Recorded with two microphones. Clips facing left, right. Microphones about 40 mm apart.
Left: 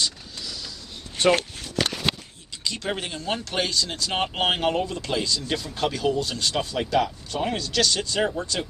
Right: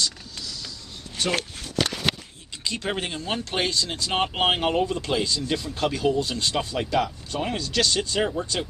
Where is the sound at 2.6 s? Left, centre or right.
Right.